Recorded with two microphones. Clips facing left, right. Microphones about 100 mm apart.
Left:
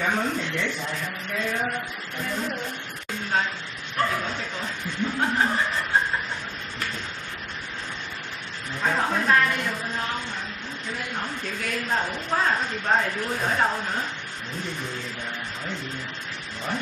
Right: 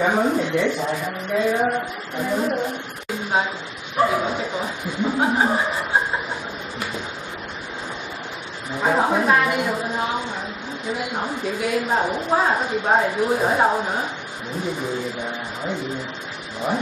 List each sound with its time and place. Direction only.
0.0 s speech: 15° right (ahead or behind)
3.9 s a sound: 15° right (ahead or behind)
8.7 s a woman's voice: 20° right (ahead or behind)